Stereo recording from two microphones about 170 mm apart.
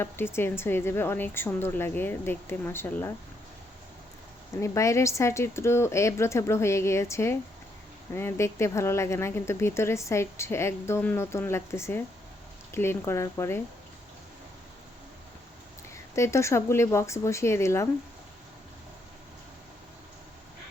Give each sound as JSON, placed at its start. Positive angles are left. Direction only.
{"t": 0.3, "sound": "speech", "side_deg": 15}
{"t": 4.6, "sound": "speech", "side_deg": 20}
{"t": 16.1, "sound": "speech", "side_deg": 15}